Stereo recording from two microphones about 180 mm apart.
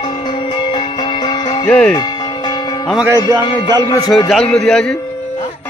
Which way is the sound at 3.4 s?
25° left (ahead or behind).